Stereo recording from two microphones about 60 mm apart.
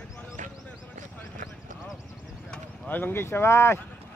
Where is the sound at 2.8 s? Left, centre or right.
Left.